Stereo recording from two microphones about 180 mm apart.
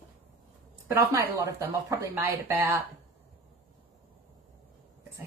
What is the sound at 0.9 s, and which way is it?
Speech, 15° right (ahead or behind).